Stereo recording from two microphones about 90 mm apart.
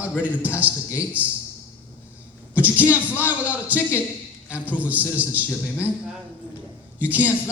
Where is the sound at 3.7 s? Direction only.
20° right (ahead or behind).